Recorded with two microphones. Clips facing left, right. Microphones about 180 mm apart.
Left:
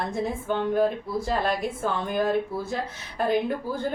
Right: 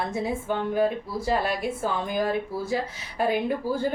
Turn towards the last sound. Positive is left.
turn(degrees=-5)  # may be behind; listen again after turning